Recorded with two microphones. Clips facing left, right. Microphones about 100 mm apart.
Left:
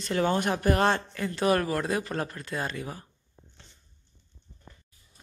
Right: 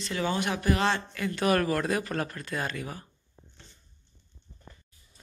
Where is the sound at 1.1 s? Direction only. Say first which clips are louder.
Left 1 dB; 30° left (ahead or behind).